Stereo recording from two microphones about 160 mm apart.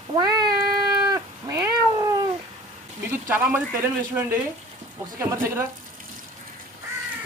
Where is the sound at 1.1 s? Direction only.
20° right (ahead or behind).